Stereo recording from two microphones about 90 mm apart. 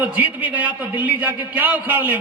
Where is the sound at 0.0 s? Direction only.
20° right (ahead or behind).